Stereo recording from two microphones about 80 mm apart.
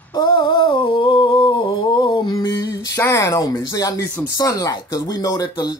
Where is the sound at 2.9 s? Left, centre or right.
Left.